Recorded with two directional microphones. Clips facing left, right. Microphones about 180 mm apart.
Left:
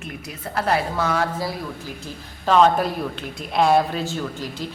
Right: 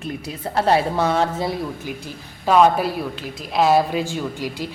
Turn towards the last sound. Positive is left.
turn(degrees=-10)  # may be behind; listen again after turning